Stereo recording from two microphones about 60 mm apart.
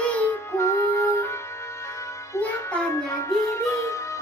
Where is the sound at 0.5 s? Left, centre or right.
Left.